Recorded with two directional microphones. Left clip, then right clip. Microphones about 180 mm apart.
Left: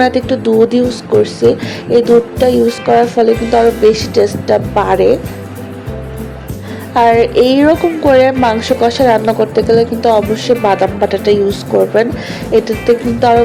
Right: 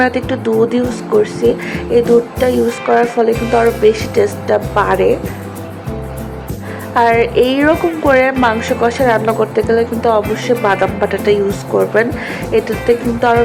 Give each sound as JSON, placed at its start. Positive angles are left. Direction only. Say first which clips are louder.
{"t": 0.0, "sound": "a woman's voice", "louder": "left 3 dB", "side_deg": 15}
{"t": 6.9, "sound": "a woman's voice", "louder": "left 3 dB", "side_deg": 15}